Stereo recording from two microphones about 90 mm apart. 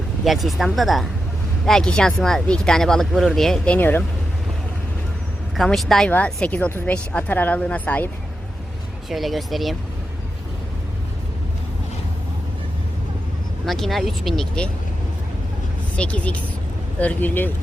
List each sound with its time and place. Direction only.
0.3 s speech: centre (ahead or behind)
3.8 s speech: 20° left (ahead or behind)
5.5 s speech: centre (ahead or behind)
6.1 s a woman's voice: 15° left (ahead or behind)
9.0 s speech: centre (ahead or behind)
13.7 s speech: centre (ahead or behind)
16.0 s a woman's voice: 15° left (ahead or behind)